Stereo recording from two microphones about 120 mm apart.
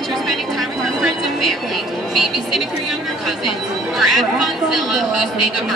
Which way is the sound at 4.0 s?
Centre (ahead or behind).